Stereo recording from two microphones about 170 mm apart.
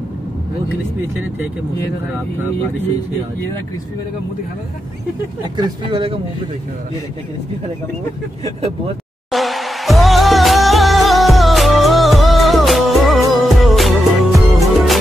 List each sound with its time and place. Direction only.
5.6 s speech: 25° right (ahead or behind)
9.3 s music: centre (ahead or behind)